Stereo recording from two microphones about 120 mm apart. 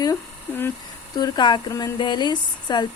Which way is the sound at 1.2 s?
35° left (ahead or behind).